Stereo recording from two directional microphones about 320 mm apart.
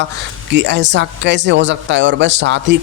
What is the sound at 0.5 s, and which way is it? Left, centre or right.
Speech, right.